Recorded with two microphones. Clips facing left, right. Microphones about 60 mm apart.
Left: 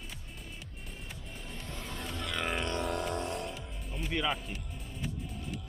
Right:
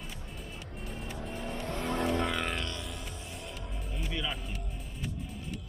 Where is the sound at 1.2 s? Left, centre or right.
Right.